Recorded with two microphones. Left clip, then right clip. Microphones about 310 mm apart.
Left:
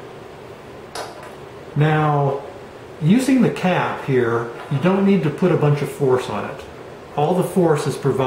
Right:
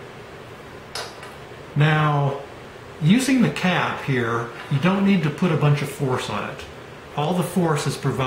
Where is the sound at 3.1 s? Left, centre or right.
Centre.